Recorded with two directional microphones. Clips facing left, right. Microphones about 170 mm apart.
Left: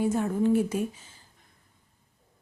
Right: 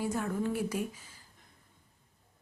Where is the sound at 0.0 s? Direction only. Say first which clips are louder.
Left 7 dB; 25° left (ahead or behind).